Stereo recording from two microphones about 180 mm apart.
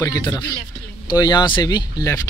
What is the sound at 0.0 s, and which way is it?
Speech, 20° left (ahead or behind).